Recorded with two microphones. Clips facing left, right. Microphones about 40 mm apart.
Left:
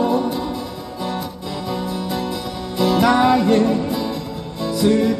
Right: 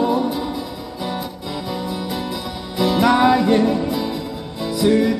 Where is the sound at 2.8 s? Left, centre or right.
Centre.